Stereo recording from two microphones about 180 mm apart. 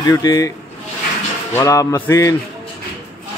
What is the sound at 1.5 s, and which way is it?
Music, 20° left (ahead or behind).